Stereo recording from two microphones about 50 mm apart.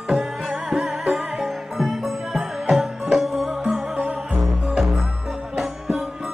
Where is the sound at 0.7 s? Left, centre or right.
Centre.